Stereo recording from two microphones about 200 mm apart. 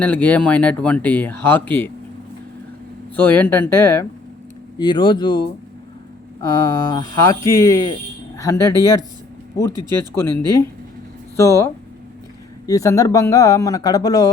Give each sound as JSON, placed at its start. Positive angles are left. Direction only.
{"t": 0.0, "sound": "speech", "side_deg": 5}
{"t": 3.2, "sound": "speech", "side_deg": 10}
{"t": 4.8, "sound": "speech", "side_deg": 20}
{"t": 10.2, "sound": "speech", "side_deg": 10}